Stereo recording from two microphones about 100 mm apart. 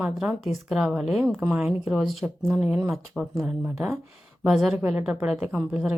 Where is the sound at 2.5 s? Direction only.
15° right (ahead or behind).